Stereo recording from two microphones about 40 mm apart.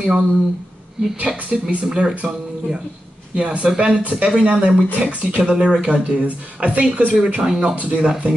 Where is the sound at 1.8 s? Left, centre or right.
Centre.